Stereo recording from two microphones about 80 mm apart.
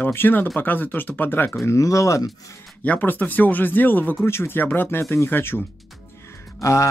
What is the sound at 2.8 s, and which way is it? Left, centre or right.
Speech, left.